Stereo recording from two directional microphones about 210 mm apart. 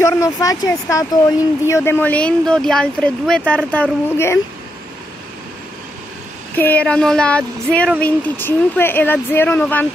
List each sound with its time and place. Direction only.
0.0 s speech: 15° left (ahead or behind)
6.5 s speech: 10° left (ahead or behind)